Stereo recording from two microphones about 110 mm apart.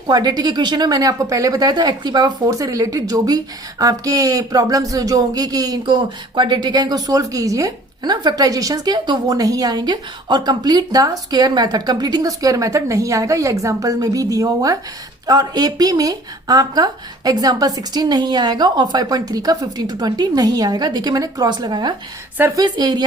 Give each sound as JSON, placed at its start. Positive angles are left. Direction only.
{"t": 0.1, "sound": "speech", "side_deg": -40}